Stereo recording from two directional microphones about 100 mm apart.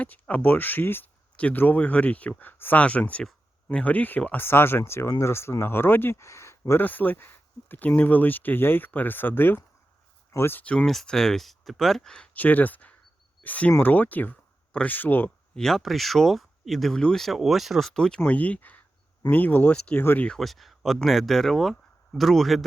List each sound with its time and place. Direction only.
0.0 s speech: 15° left (ahead or behind)
6.8 s speech: 20° left (ahead or behind)
10.7 s speech: 10° left (ahead or behind)
15.5 s speech: 5° left (ahead or behind)